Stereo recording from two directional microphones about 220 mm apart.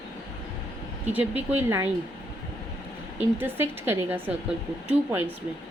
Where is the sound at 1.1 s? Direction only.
10° right (ahead or behind).